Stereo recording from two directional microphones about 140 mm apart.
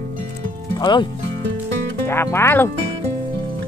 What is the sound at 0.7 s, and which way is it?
Speech, 30° left (ahead or behind).